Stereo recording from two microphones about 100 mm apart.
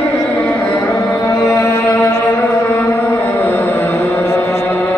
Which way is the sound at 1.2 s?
30° left (ahead or behind).